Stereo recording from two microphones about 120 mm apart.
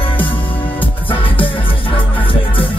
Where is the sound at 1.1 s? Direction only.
50° left (ahead or behind).